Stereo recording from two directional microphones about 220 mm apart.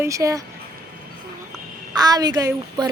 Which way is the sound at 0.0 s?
15° right (ahead or behind).